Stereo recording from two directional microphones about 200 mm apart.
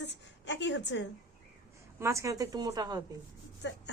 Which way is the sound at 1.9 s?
15° right (ahead or behind).